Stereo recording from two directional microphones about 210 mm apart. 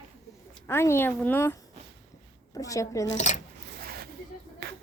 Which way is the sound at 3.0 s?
35° left (ahead or behind).